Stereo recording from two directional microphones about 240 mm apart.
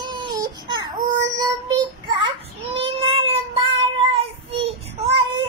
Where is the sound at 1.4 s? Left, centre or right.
Centre.